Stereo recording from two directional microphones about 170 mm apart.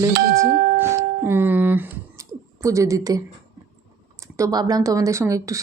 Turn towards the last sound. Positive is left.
turn(degrees=-20)  # may be behind; listen again after turning